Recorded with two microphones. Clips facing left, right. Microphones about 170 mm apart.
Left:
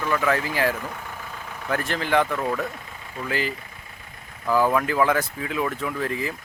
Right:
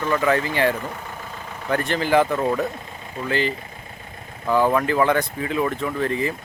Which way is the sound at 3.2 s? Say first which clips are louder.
Right 4 dB; 5° left (ahead or behind).